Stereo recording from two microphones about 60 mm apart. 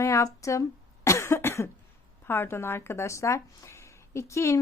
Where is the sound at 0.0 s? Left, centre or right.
Left.